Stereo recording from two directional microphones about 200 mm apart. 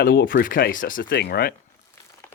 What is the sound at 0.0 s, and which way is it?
Speech, 50° left (ahead or behind).